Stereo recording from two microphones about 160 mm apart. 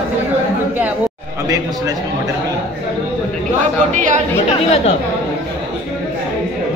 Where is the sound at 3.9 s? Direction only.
50° right (ahead or behind).